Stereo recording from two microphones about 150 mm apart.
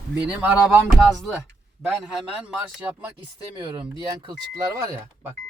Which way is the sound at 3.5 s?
30° right (ahead or behind).